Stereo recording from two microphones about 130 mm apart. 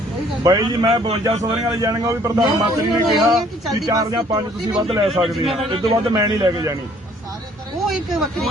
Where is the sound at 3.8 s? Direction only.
30° right (ahead or behind).